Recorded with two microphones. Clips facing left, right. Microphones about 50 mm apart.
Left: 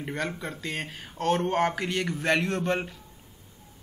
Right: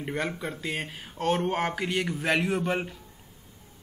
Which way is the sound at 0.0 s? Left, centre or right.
Centre.